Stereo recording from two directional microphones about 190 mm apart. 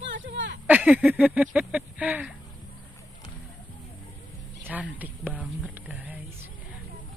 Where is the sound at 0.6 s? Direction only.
10° right (ahead or behind).